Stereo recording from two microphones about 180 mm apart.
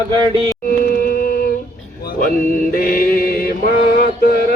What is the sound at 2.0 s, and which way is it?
Mantra, 55° left (ahead or behind).